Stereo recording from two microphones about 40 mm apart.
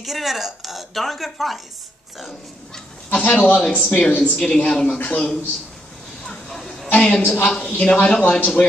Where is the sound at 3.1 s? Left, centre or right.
Left.